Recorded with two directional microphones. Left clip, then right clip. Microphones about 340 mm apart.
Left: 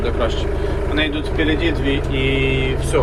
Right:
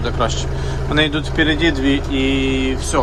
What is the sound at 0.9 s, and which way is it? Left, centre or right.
Speech, centre.